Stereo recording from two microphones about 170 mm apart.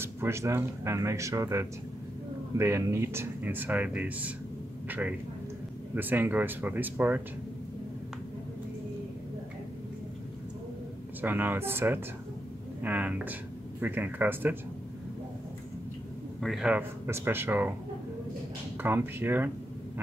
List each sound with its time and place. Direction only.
0.0 s a man's voice: 15° right (ahead or behind)
11.1 s speech: 10° right (ahead or behind)
16.3 s speech: centre (ahead or behind)
18.8 s speech: 10° right (ahead or behind)